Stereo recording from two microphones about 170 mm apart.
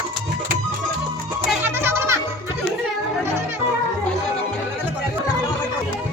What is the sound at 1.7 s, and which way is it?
Music, 15° right (ahead or behind).